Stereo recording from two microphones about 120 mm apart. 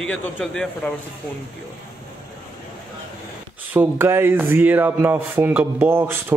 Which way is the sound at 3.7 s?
20° right (ahead or behind).